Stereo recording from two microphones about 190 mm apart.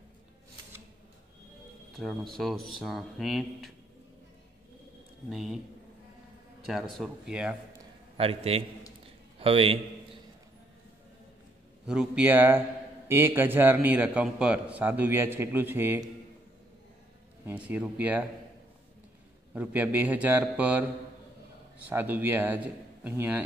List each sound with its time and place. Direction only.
2.0 s speech: centre (ahead or behind)
5.3 s speech: centre (ahead or behind)
6.7 s speech: centre (ahead or behind)
8.2 s a man's voice: 30° right (ahead or behind)
11.8 s a man's voice: 5° right (ahead or behind)
17.5 s a man's voice: 10° right (ahead or behind)
19.5 s a man's voice: 10° right (ahead or behind)
21.8 s a man's voice: 10° right (ahead or behind)